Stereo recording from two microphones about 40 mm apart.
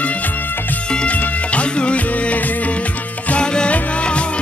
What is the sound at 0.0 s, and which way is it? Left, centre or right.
Music, left.